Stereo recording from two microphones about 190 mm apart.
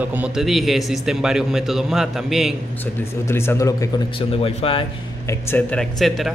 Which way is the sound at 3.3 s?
10° left (ahead or behind).